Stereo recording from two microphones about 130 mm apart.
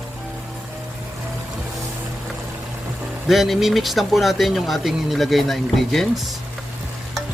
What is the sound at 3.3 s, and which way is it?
Speech, centre (ahead or behind).